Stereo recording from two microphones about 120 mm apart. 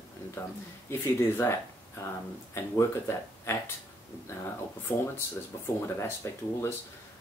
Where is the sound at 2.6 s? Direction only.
20° left (ahead or behind).